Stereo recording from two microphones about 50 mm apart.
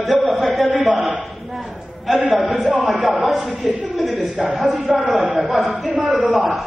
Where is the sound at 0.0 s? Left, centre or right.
Centre.